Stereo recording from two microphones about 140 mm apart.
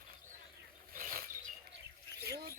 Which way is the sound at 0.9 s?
90° right.